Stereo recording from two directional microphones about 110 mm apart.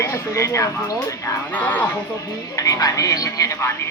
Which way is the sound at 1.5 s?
15° left (ahead or behind).